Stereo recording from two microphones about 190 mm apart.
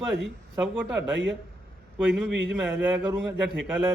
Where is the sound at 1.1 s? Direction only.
70° right (ahead or behind).